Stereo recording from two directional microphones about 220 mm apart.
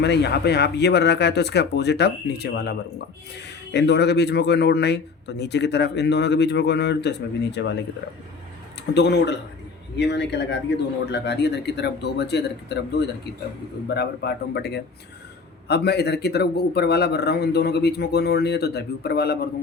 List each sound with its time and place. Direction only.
0.0 s a man's voice: 50° left (ahead or behind)
9.0 s a man's voice: 50° left (ahead or behind)